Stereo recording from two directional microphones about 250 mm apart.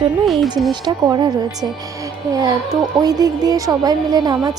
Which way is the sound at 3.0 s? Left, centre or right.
Centre.